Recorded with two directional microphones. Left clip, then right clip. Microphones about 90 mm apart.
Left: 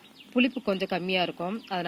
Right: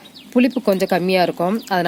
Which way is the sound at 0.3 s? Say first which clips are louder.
Right 10 dB; 25° right (ahead or behind).